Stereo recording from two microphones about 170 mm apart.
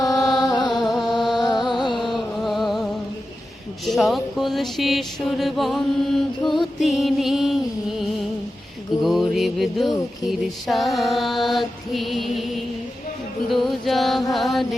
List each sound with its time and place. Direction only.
0.0 s music: 20° left (ahead or behind)
0.7 s music: centre (ahead or behind)
1.4 s music: 25° left (ahead or behind)
2.4 s a sound: centre (ahead or behind)
3.8 s mantra: centre (ahead or behind)
13.5 s mantra: centre (ahead or behind)